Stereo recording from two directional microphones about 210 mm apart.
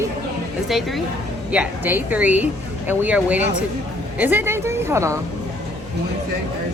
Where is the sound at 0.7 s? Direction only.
Centre (ahead or behind).